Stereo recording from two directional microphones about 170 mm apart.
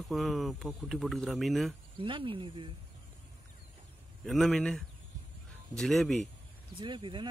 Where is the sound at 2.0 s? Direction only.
30° right (ahead or behind).